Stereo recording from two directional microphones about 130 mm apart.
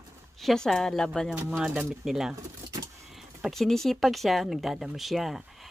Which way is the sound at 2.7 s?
25° right (ahead or behind).